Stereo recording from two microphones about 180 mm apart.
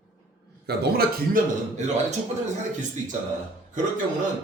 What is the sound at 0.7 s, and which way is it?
Speech, 65° right (ahead or behind).